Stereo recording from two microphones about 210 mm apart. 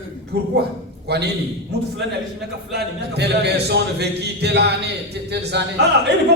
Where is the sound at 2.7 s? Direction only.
55° right (ahead or behind).